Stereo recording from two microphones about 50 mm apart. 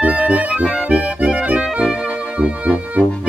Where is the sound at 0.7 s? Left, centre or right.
Centre.